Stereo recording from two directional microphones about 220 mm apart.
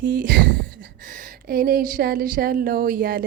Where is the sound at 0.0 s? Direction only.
40° right (ahead or behind).